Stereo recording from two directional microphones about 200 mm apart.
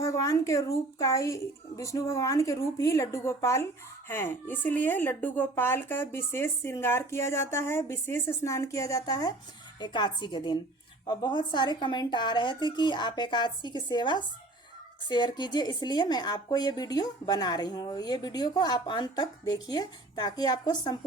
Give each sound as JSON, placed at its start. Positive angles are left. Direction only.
{"t": 0.0, "sound": "speech", "side_deg": 15}